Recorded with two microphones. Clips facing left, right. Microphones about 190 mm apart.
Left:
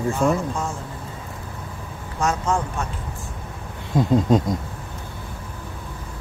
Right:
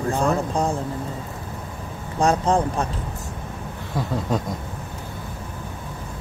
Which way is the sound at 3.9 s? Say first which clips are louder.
Left 7 dB; 20° left (ahead or behind).